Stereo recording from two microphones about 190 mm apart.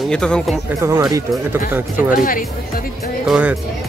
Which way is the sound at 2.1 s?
45° left (ahead or behind).